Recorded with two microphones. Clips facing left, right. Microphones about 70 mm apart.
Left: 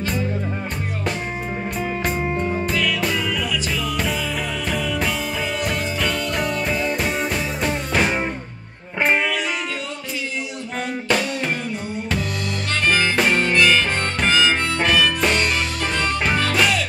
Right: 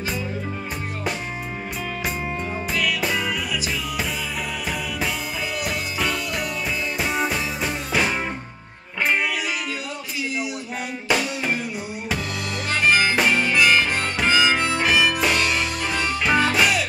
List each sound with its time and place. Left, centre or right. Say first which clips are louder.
2.2 s music: left 5 dB; left
2.7 s music: left 2 dB; centre
5.6 s music: left 1 dB; centre
11.1 s music: even; centre
12.8 s harmonica: even; centre